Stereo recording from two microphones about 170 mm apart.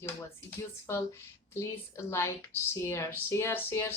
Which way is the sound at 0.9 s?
15° left (ahead or behind).